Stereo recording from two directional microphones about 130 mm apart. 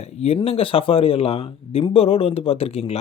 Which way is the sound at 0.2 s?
50° left (ahead or behind).